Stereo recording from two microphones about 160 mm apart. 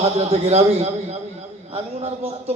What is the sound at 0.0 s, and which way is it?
Speech, 40° right (ahead or behind).